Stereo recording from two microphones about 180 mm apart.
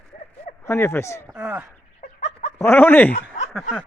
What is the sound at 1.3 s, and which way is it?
Speech, 10° right (ahead or behind).